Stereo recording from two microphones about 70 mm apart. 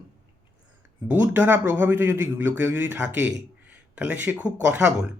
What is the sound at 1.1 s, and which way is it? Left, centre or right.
A man's voice, right.